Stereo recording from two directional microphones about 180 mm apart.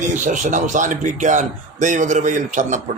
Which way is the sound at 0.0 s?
45° right (ahead or behind).